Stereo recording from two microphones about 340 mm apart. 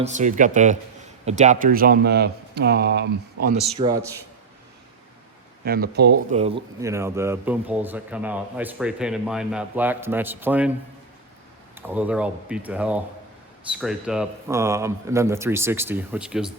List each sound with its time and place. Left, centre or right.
0.0 s speech: right
3.8 s speech: centre
5.6 s speech: right
6.4 s speech: centre
11.7 s speech: centre